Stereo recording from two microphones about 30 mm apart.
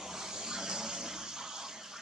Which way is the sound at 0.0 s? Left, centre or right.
Centre.